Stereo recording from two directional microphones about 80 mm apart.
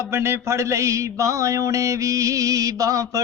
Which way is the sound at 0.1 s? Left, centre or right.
Right.